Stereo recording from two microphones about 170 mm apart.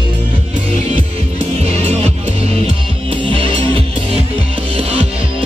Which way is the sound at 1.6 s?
40° right (ahead or behind).